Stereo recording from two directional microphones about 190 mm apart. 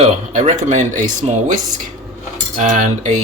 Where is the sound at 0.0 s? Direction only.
35° right (ahead or behind).